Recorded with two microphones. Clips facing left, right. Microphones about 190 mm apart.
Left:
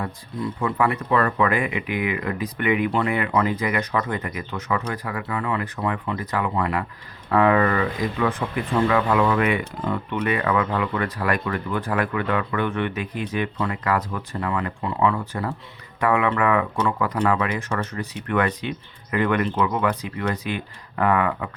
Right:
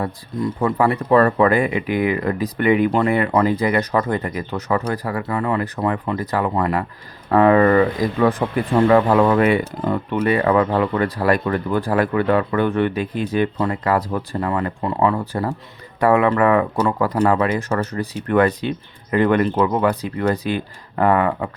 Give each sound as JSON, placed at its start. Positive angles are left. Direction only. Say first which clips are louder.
{"t": 0.6, "sound": "speech", "louder": "right 4 dB", "side_deg": -35}